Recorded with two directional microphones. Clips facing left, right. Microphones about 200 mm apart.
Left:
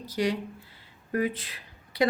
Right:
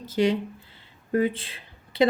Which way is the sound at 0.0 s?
25° right (ahead or behind).